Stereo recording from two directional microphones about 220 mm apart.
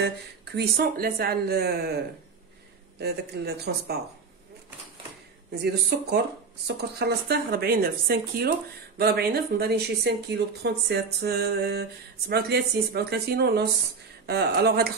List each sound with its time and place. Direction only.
0.0 s speech: 50° right (ahead or behind)
3.0 s speech: 45° right (ahead or behind)
5.6 s speech: 45° right (ahead or behind)